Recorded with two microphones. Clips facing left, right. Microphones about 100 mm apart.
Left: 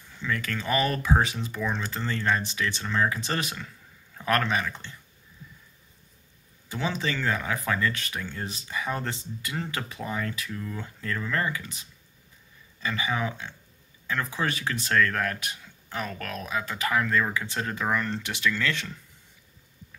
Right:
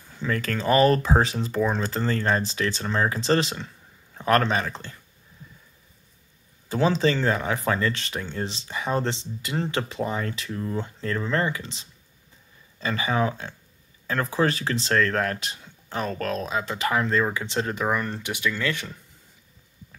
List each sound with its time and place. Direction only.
0.1 s speech: 40° right (ahead or behind)
6.7 s speech: 35° right (ahead or behind)
17.8 s speech: 15° right (ahead or behind)